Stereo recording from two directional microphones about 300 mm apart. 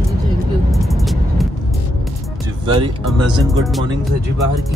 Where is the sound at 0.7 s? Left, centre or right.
Centre.